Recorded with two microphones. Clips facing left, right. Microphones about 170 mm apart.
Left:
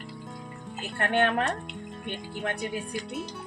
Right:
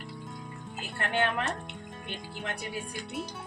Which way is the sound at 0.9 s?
55° left (ahead or behind).